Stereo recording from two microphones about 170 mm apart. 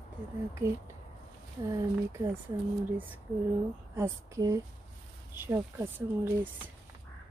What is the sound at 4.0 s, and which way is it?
Speech, 20° right (ahead or behind).